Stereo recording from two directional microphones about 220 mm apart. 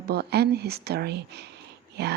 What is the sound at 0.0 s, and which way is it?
Speech, 45° right (ahead or behind).